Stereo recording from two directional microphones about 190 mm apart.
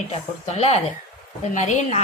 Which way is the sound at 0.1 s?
35° left (ahead or behind).